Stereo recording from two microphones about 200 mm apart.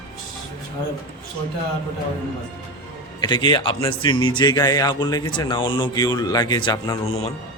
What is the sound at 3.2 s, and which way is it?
A man's voice, 20° left (ahead or behind).